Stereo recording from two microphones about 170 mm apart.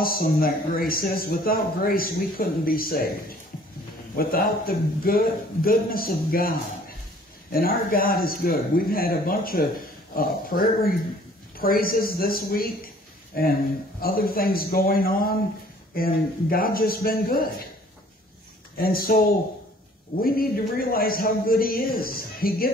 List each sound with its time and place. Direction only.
0.0 s speech: 60° left (ahead or behind)
4.2 s speech: 60° left (ahead or behind)
7.5 s a man's voice: 60° left (ahead or behind)
18.8 s speech: 60° left (ahead or behind)